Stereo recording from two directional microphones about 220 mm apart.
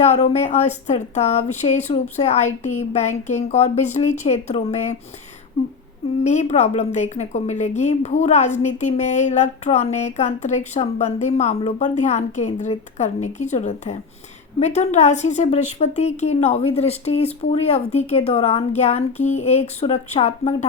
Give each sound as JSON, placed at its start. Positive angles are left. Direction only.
{"t": 0.0, "sound": "a woman's voice", "side_deg": 30}
{"t": 6.2, "sound": "a woman's voice", "side_deg": 30}